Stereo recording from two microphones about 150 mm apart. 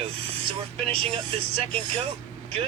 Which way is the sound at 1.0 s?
40° right (ahead or behind).